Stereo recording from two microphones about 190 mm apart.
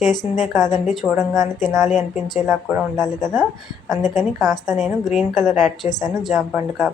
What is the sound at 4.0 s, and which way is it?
Speech, 40° left (ahead or behind).